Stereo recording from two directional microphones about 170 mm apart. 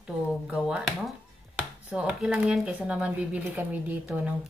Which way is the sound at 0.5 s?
5° right (ahead or behind).